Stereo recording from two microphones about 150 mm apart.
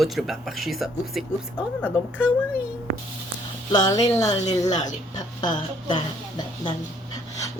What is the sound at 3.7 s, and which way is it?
Speech, 25° left (ahead or behind).